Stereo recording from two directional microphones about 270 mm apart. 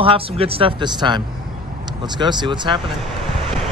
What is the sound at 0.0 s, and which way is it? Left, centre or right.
Speech, centre.